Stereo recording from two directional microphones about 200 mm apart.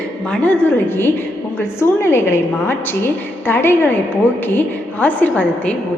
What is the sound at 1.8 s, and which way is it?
A woman's voice, 10° left (ahead or behind).